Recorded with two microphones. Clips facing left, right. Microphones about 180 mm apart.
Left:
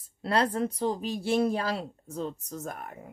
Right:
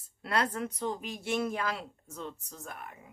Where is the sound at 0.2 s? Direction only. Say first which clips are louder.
Left 5 dB; 30° left (ahead or behind).